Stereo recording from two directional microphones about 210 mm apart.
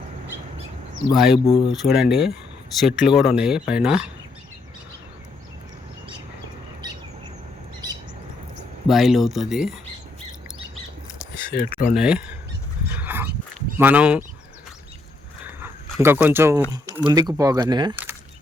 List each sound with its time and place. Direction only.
1.1 s speech: centre (ahead or behind)
8.9 s speech: centre (ahead or behind)
11.6 s speech: 40° left (ahead or behind)
11.9 s speech: 5° right (ahead or behind)
12.9 s dog: 10° right (ahead or behind)
13.7 s speech: 10° right (ahead or behind)
15.4 s dog: 10° right (ahead or behind)
17.1 s speech: 20° right (ahead or behind)